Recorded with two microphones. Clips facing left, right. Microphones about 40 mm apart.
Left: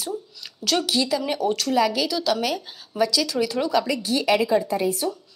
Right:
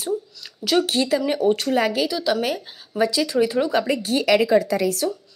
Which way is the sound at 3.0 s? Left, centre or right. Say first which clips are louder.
Right 3 dB; right.